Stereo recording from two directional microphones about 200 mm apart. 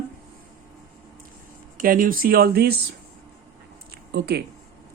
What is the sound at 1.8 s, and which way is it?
Speech, 45° right (ahead or behind).